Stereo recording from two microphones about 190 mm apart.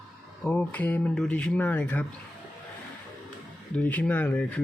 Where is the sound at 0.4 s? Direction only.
10° left (ahead or behind).